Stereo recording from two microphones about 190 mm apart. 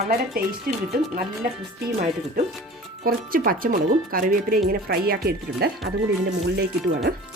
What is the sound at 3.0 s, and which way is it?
Speech, 50° right (ahead or behind).